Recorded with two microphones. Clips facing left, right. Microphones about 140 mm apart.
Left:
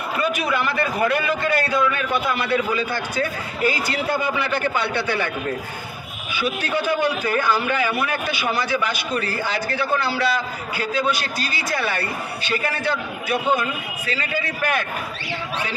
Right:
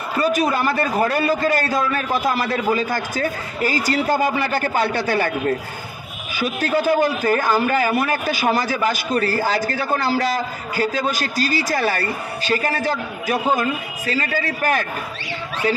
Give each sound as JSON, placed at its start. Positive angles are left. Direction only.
{"t": 0.2, "sound": "a man's voice", "side_deg": -40}
{"t": 6.3, "sound": "a man's voice", "side_deg": -40}